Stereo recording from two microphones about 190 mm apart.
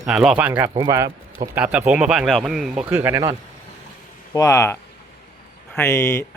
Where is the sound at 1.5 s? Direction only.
5° right (ahead or behind).